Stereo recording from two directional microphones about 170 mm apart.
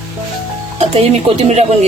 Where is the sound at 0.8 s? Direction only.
40° right (ahead or behind).